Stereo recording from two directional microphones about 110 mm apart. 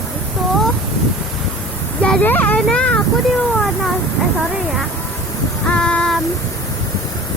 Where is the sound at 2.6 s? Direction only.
10° left (ahead or behind).